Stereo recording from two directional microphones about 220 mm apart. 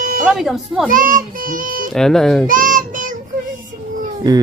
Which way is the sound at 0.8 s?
40° right (ahead or behind).